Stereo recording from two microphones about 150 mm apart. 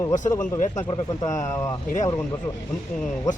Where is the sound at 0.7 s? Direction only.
25° left (ahead or behind).